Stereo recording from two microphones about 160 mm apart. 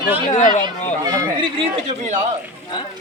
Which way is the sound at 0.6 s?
30° right (ahead or behind).